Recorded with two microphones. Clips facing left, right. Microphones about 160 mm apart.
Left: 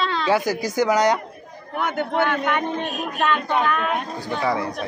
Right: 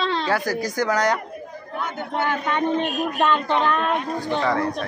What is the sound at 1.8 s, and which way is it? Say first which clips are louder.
Speech: left 4 dB; 65° left (ahead or behind).